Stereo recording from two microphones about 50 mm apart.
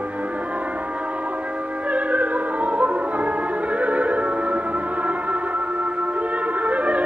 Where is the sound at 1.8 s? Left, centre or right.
Right.